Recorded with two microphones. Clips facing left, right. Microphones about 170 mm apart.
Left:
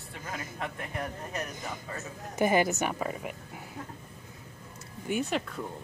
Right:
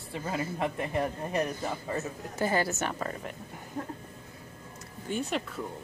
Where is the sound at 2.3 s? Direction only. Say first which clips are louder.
Left 4 dB; 15° left (ahead or behind).